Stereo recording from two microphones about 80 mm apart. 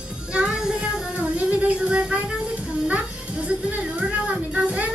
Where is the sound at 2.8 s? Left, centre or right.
Centre.